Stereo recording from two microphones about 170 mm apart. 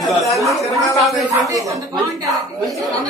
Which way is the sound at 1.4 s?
20° right (ahead or behind).